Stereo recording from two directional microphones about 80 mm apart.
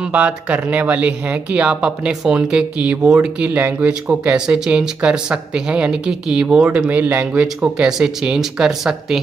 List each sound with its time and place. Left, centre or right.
0.0 s speech: centre